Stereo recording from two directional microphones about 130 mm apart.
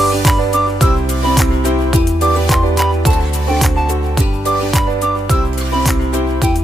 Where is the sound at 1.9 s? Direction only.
Centre (ahead or behind).